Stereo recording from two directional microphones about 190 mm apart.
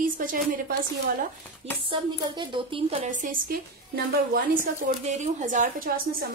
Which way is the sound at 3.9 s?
50° right (ahead or behind).